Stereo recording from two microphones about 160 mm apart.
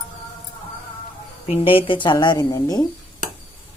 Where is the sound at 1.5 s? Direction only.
35° left (ahead or behind).